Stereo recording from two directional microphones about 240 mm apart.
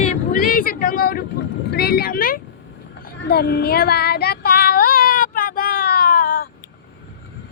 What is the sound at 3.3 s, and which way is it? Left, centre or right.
Child singing, left.